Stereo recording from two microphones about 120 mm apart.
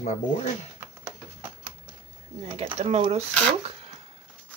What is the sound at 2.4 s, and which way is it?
Speech, 60° right (ahead or behind).